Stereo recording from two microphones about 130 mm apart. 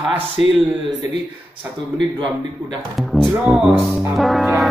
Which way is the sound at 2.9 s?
Centre (ahead or behind).